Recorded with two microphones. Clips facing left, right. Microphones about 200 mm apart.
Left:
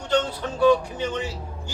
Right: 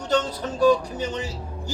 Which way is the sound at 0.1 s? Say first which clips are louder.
Even; 40° right (ahead or behind).